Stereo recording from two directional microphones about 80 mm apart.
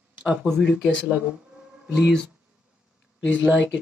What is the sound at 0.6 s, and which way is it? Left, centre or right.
Speech, centre.